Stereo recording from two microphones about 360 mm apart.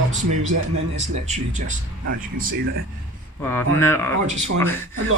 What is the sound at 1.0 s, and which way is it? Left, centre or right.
Speech, centre.